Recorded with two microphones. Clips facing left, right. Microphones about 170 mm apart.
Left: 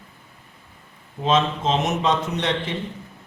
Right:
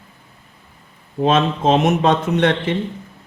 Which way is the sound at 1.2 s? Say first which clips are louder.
Right 5 dB; 55° right (ahead or behind).